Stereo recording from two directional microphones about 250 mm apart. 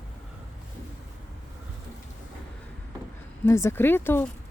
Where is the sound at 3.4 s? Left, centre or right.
Centre.